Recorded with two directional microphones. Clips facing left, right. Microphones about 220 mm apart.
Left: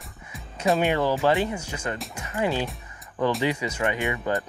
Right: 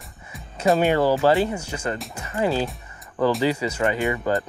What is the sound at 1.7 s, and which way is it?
Speech, 35° right (ahead or behind).